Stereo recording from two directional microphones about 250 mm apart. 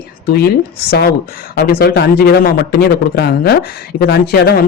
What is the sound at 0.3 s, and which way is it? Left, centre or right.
Speech, left.